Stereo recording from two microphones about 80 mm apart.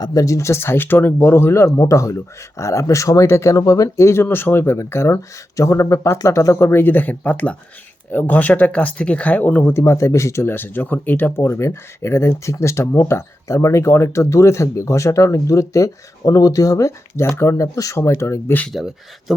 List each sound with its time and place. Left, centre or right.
0.0 s speech: left
18.8 s speech: centre